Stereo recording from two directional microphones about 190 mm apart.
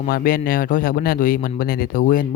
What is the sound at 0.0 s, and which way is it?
Speech, 50° left (ahead or behind).